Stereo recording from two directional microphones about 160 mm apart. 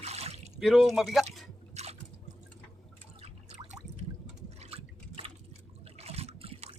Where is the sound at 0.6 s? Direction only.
Centre (ahead or behind).